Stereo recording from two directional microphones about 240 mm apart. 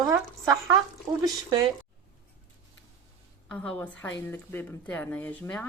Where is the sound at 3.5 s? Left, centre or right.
Centre.